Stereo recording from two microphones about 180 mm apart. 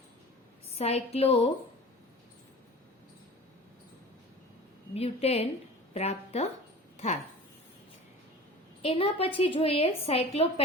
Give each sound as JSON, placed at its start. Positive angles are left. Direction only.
{"t": 0.8, "sound": "a woman's voice", "side_deg": 35}
{"t": 4.9, "sound": "a woman's voice", "side_deg": 35}
{"t": 6.9, "sound": "dog", "side_deg": 40}
{"t": 8.8, "sound": "a woman's voice", "side_deg": 30}